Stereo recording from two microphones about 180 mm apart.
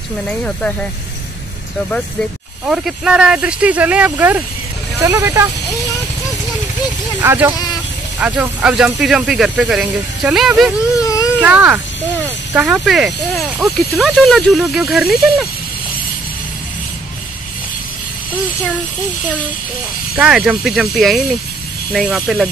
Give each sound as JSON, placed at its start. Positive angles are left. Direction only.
{"t": 0.3, "sound": "speech", "side_deg": 5}
{"t": 2.6, "sound": "speech", "side_deg": -5}
{"t": 7.2, "sound": "speech", "side_deg": -10}
{"t": 11.0, "sound": "baby cry", "side_deg": 20}
{"t": 11.4, "sound": "speech", "side_deg": -10}
{"t": 20.2, "sound": "speech", "side_deg": -5}